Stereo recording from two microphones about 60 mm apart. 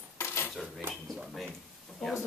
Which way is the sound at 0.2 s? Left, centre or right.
Left.